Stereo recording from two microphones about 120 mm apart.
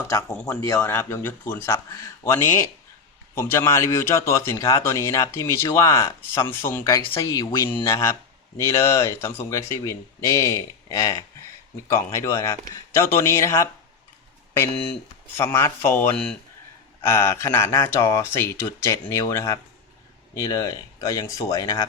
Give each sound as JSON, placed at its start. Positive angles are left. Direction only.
{"t": 0.0, "sound": "a man's voice", "side_deg": 25}
{"t": 15.4, "sound": "a man's voice", "side_deg": 20}
{"t": 16.1, "sound": "speech", "side_deg": 5}
{"t": 17.0, "sound": "a man's voice", "side_deg": 20}